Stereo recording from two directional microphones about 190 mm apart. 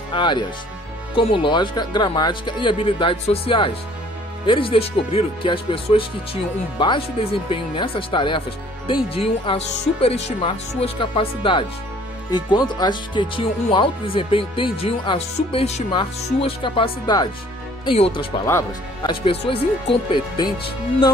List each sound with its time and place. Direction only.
0.1 s speech: 25° left (ahead or behind)